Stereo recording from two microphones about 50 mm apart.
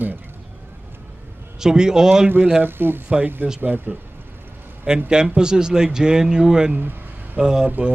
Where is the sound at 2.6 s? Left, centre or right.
Right.